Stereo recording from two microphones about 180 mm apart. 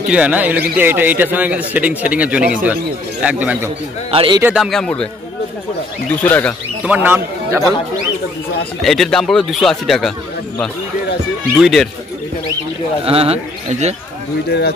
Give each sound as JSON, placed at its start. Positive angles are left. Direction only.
{"t": 0.1, "sound": "a man's voice", "side_deg": -5}
{"t": 4.1, "sound": "speech", "side_deg": -30}
{"t": 4.4, "sound": "a man's voice", "side_deg": -10}
{"t": 4.6, "sound": "a man's voice", "side_deg": 5}
{"t": 6.2, "sound": "speech", "side_deg": 10}
{"t": 6.8, "sound": "speech", "side_deg": -10}
{"t": 8.8, "sound": "a man's voice", "side_deg": 0}
{"t": 11.5, "sound": "a man's voice", "side_deg": 0}
{"t": 13.0, "sound": "speech", "side_deg": -30}